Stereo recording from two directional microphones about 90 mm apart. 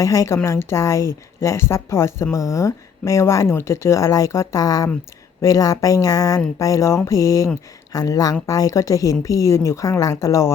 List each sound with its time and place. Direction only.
0.0 s speech: 40° left (ahead or behind)